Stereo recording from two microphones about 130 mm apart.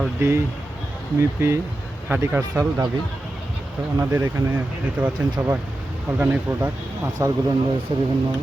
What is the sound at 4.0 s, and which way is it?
Speech, 20° right (ahead or behind).